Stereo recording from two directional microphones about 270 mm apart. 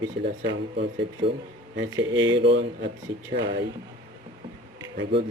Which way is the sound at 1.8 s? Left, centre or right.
Right.